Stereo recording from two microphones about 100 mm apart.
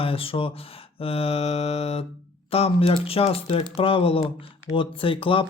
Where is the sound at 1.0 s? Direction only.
80° left.